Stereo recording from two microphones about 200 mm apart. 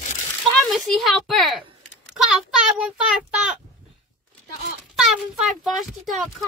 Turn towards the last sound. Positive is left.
turn(degrees=0)  # may be behind; listen again after turning